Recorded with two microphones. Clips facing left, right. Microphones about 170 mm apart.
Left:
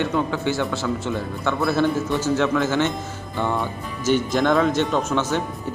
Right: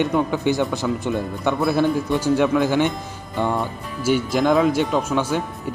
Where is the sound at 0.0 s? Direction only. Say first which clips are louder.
Right 3 dB; 15° right (ahead or behind).